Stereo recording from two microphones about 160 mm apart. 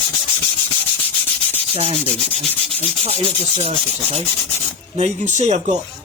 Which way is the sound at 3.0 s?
40° right (ahead or behind).